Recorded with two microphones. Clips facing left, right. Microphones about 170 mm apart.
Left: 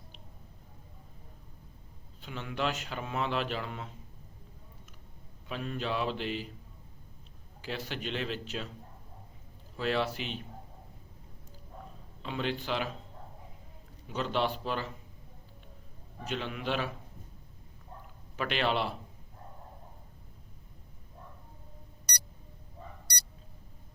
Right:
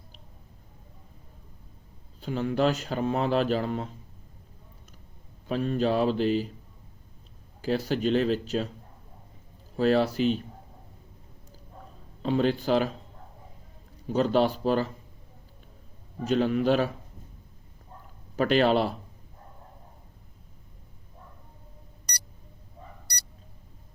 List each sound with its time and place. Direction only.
2.2 s speech: 40° right (ahead or behind)
5.5 s speech: 35° right (ahead or behind)
7.6 s speech: 40° right (ahead or behind)
9.7 s speech: 40° right (ahead or behind)
12.2 s speech: 40° right (ahead or behind)
14.1 s speech: 40° right (ahead or behind)
16.2 s speech: 40° right (ahead or behind)
18.3 s speech: 40° right (ahead or behind)